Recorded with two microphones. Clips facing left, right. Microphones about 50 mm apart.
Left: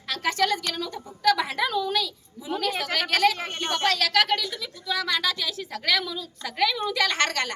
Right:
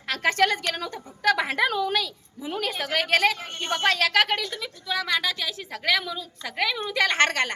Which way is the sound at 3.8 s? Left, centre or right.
Right.